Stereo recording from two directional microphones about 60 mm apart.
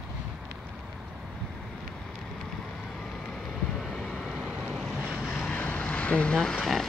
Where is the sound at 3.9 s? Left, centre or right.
Centre.